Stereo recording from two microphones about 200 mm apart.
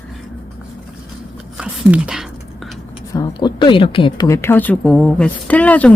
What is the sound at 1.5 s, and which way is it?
Speech, 5° right (ahead or behind).